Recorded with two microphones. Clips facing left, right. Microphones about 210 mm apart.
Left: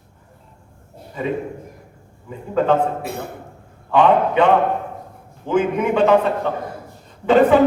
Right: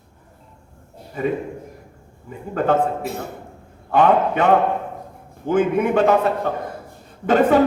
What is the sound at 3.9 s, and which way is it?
Speech, 45° right (ahead or behind).